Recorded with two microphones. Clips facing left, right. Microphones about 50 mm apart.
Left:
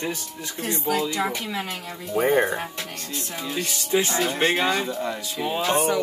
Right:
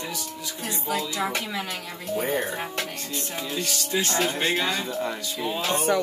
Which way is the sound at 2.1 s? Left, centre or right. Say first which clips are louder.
Left 7 dB; left.